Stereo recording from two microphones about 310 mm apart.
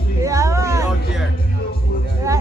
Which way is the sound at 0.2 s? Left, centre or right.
Centre.